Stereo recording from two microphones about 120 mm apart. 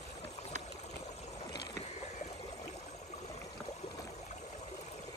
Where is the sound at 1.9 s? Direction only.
70° left (ahead or behind).